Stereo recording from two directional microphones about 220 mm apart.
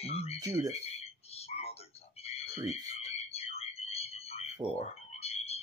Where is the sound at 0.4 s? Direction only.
15° right (ahead or behind).